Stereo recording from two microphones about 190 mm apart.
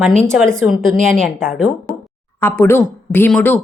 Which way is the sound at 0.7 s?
Centre (ahead or behind).